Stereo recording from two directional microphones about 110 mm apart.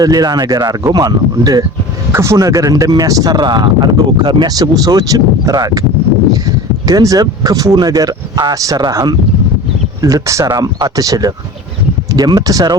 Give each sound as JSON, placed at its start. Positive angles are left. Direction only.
{"t": 0.0, "sound": "speech", "side_deg": -35}
{"t": 6.8, "sound": "speech", "side_deg": -35}